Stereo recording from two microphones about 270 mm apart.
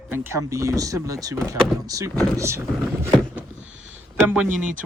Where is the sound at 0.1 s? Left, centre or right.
Centre.